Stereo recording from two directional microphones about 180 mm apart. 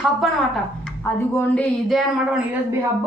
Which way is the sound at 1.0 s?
10° left (ahead or behind).